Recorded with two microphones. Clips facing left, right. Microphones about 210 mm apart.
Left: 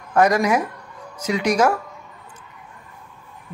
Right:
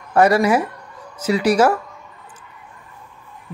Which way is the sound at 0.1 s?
10° right (ahead or behind).